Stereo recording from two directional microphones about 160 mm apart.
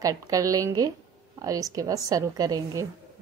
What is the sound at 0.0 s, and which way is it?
A woman's voice, 20° right (ahead or behind).